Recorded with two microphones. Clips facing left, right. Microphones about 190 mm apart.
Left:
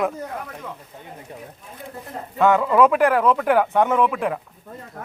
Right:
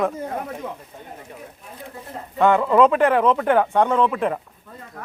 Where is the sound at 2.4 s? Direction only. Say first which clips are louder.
Even; 15° right (ahead or behind).